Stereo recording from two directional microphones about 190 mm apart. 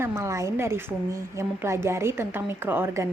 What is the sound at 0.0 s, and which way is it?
A woman's voice, 15° right (ahead or behind).